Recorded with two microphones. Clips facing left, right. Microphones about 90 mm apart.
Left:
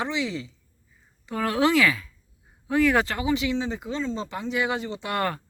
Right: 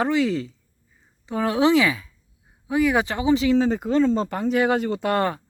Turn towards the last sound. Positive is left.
turn(degrees=-25)  # may be behind; listen again after turning